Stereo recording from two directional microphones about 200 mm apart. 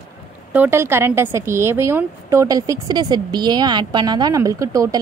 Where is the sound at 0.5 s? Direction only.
10° right (ahead or behind).